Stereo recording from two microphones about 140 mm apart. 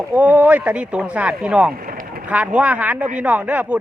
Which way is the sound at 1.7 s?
90° right.